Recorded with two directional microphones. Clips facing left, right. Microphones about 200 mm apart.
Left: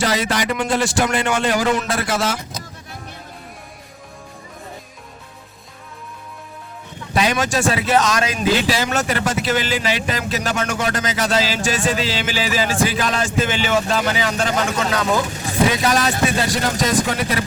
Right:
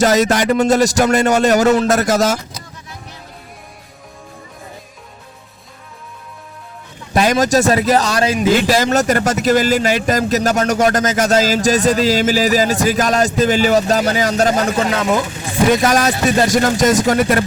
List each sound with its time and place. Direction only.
0.0 s speech: 45° right (ahead or behind)
7.1 s speech: 45° right (ahead or behind)
8.6 s speech: 45° right (ahead or behind)